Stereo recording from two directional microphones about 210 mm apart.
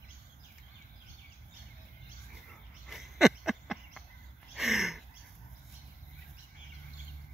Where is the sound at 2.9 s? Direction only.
Centre (ahead or behind).